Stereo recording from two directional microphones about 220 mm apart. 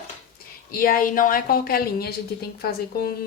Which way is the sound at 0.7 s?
40° left (ahead or behind).